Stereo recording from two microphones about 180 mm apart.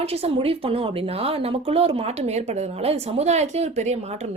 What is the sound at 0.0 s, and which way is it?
Speech, 35° right (ahead or behind).